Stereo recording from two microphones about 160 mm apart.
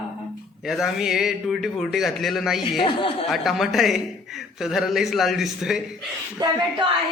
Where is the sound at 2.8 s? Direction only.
30° left (ahead or behind).